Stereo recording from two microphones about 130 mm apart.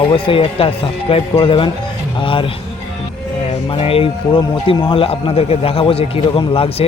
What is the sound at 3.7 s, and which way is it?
Speech, 45° left (ahead or behind).